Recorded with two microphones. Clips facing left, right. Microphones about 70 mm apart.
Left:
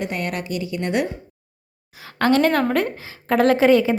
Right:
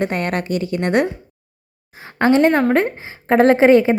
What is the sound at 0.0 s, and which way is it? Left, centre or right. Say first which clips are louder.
A woman's voice: right 5 dB; right.